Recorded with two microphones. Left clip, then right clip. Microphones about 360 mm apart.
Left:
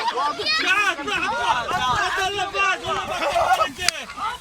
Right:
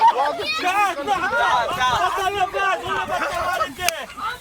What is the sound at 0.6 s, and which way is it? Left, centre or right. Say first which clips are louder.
Speech: right 3 dB; centre.